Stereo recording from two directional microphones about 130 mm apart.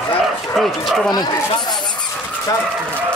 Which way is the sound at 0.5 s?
Centre (ahead or behind).